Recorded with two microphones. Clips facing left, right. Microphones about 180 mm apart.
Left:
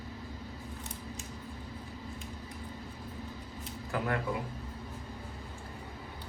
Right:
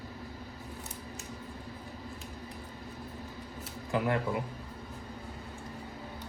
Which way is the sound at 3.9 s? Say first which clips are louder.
Right 4 dB; 20° right (ahead or behind).